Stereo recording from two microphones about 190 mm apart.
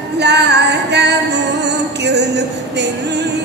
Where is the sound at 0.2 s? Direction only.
65° right (ahead or behind).